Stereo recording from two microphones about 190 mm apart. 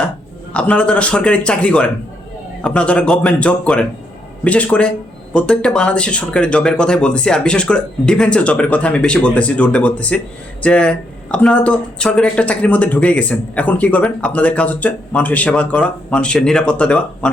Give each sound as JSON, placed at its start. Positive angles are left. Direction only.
{"t": 0.5, "sound": "speech", "side_deg": 5}